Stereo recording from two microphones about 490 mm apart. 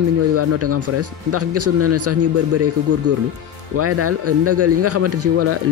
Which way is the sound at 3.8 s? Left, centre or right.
Right.